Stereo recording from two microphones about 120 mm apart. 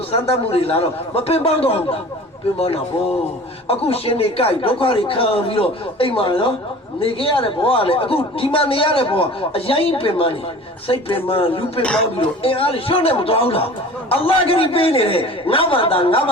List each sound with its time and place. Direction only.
0.1 s a man's voice: 55° left (ahead or behind)
3.7 s speech: 55° left (ahead or behind)
11.8 s speech: 10° left (ahead or behind)
12.1 s speech: 50° left (ahead or behind)